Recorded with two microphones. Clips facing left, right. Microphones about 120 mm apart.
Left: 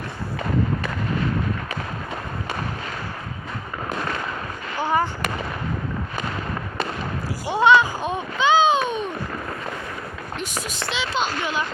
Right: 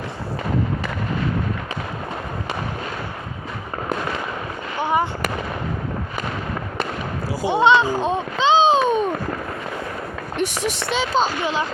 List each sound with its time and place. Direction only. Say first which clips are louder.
4.8 s fireworks: right 1 dB; 20° right (ahead or behind)
7.4 s a sound: right 1 dB; 20° right (ahead or behind); by 9.1 s 40° right (ahead or behind)
10.3 s speech: right 8 dB; 65° right (ahead or behind)
10.9 s speech: right 5 dB; 45° right (ahead or behind)